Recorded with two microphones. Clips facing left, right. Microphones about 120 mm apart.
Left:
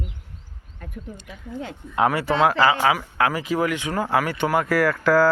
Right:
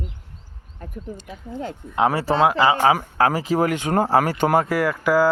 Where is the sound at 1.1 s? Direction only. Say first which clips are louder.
Right 1 dB; 40° right (ahead or behind).